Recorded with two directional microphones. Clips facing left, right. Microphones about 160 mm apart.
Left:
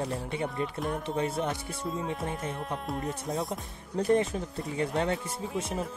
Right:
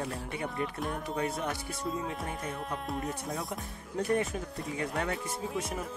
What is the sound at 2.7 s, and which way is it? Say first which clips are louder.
Music: left 2 dB; centre (ahead or behind).